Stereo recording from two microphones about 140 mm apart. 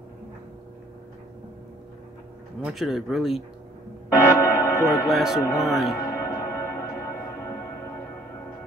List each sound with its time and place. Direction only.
2.6 s speech: centre (ahead or behind)
4.1 s bell: 20° left (ahead or behind)
5.0 s speech: centre (ahead or behind)
5.9 s music: 25° left (ahead or behind)